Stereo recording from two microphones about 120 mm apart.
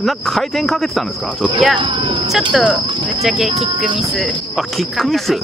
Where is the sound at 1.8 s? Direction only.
40° right (ahead or behind).